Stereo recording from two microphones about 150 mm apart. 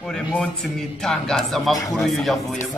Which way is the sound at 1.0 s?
5° left (ahead or behind).